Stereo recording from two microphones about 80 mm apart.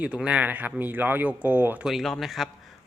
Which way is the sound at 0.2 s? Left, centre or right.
Centre.